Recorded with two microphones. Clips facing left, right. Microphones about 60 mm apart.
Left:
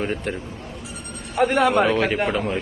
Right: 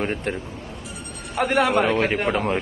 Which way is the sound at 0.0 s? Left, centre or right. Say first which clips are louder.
Even; right.